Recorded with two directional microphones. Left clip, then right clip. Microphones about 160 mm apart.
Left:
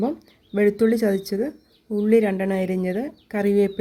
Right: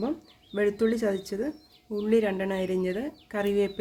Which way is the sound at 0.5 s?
30° left (ahead or behind).